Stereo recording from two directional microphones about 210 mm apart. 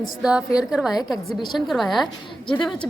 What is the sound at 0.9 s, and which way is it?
Speech, 20° left (ahead or behind).